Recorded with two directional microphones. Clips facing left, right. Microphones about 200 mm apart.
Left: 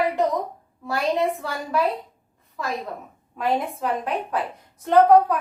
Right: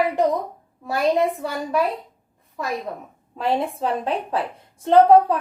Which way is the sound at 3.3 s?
30° right (ahead or behind).